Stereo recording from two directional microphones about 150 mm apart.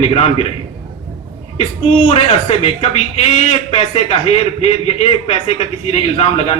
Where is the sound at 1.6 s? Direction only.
45° left (ahead or behind).